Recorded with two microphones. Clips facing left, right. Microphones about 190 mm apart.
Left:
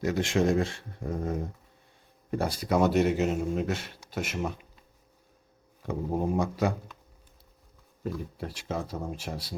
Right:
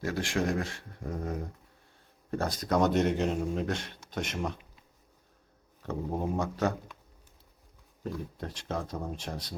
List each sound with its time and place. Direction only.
0.0 s speech: 20° left (ahead or behind)
2.3 s speech: 10° left (ahead or behind)
5.8 s speech: 10° left (ahead or behind)
8.0 s speech: 10° left (ahead or behind)